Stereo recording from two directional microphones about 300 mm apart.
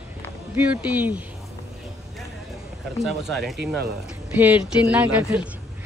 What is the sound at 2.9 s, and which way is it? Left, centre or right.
Speech, centre.